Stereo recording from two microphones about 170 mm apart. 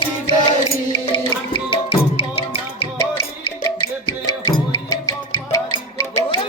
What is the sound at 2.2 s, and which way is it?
Music, 30° left (ahead or behind).